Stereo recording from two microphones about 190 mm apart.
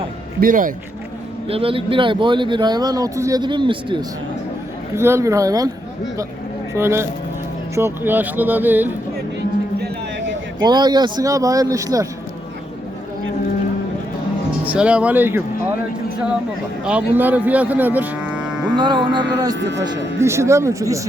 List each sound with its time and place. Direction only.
0.3 s speech: 45° right (ahead or behind)
1.5 s speech: 30° right (ahead or behind)
4.9 s speech: 15° right (ahead or behind)
6.7 s speech: 15° right (ahead or behind)
10.6 s speech: 20° right (ahead or behind)
14.6 s speech: 5° right (ahead or behind)
16.8 s cattle: 10° right (ahead or behind)
18.8 s speech: 25° right (ahead or behind)
19.5 s a man's voice: 65° right (ahead or behind)
19.8 s speech: 15° right (ahead or behind)